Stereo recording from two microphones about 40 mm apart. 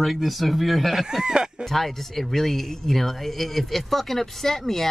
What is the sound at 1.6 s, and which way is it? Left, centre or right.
Speech, centre.